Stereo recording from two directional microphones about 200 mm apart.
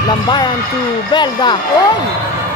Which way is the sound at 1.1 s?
20° left (ahead or behind).